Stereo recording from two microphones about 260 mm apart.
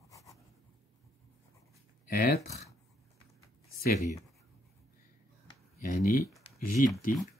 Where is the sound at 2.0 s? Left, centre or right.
Left.